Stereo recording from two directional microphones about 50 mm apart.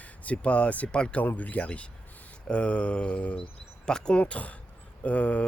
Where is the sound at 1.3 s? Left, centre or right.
Left.